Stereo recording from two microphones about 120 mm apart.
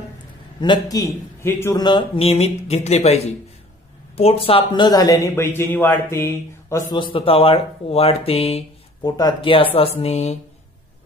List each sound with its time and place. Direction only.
0.6 s speech: 35° left (ahead or behind)
1.8 s speech: 40° left (ahead or behind)
2.1 s speech: 60° left (ahead or behind); by 6.8 s 20° left (ahead or behind)
6.9 s speech: 45° left (ahead or behind)
9.0 s speech: 35° left (ahead or behind)
9.5 s speech: 50° left (ahead or behind)